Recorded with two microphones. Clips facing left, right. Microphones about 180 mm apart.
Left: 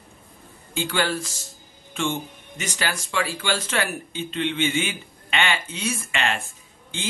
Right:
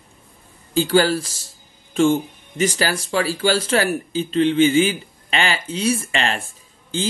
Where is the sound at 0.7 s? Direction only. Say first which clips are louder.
Right 8 dB; 35° right (ahead or behind).